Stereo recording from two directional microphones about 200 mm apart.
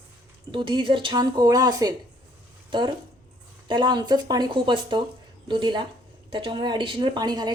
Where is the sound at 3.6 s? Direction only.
20° right (ahead or behind).